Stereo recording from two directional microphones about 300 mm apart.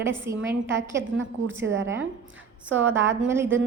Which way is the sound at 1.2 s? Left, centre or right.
Right.